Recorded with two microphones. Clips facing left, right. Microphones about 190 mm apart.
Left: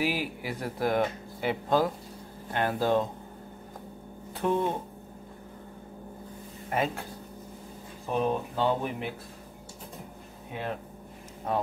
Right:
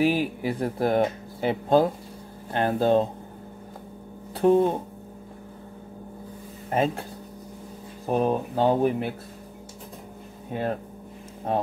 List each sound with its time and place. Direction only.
0.0 s speech: 30° right (ahead or behind)
4.4 s speech: 35° right (ahead or behind)
6.7 s speech: 30° right (ahead or behind)
8.1 s speech: 40° right (ahead or behind)
10.5 s speech: 45° right (ahead or behind)